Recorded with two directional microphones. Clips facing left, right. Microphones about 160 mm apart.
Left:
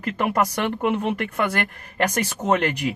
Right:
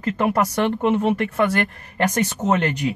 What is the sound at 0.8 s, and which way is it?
Speech, 30° right (ahead or behind).